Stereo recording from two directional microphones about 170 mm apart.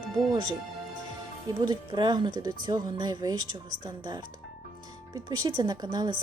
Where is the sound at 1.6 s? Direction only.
25° right (ahead or behind).